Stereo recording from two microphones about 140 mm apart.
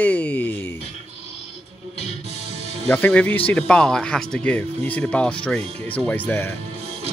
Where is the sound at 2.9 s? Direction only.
10° left (ahead or behind).